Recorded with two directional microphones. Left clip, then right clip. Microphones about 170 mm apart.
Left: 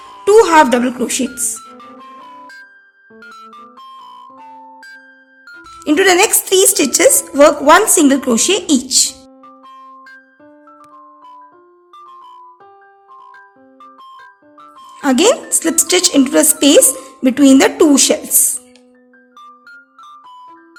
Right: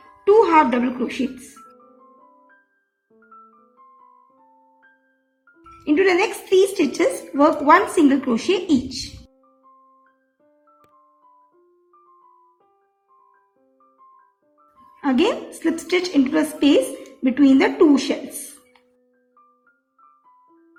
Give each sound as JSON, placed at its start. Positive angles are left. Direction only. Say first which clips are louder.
{"t": 0.3, "sound": "speech", "louder": "left 6 dB", "side_deg": 40}
{"t": 5.8, "sound": "a woman's voice", "louder": "left 7 dB", "side_deg": 40}
{"t": 10.7, "sound": "music", "louder": "left 14 dB", "side_deg": 30}
{"t": 14.6, "sound": "music", "louder": "left 7 dB", "side_deg": 35}
{"t": 15.6, "sound": "a woman's voice", "louder": "left 7 dB", "side_deg": 35}